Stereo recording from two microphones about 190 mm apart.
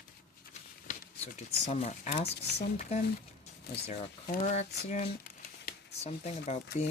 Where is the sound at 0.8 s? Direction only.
40° left (ahead or behind).